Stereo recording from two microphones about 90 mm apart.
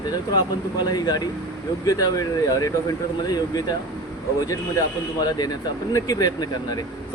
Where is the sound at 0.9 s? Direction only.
50° left (ahead or behind).